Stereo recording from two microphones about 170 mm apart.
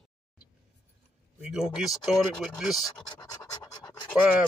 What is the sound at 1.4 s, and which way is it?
Speech, 5° right (ahead or behind).